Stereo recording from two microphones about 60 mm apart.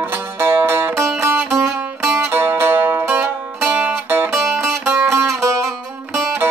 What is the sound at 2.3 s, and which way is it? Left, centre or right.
Zither, right.